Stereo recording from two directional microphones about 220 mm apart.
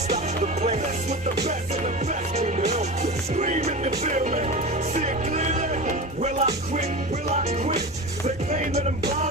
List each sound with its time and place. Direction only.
0.1 s music: 30° right (ahead or behind)
2.3 s music: 30° right (ahead or behind)